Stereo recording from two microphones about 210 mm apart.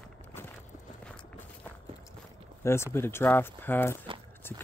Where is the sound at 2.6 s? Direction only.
10° left (ahead or behind).